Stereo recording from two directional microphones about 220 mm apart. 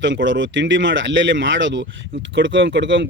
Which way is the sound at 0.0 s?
55° right (ahead or behind).